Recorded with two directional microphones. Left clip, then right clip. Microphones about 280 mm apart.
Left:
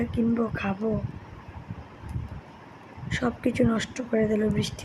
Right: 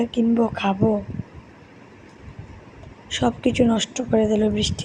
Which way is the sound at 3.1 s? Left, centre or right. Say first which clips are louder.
Right 6 dB; centre.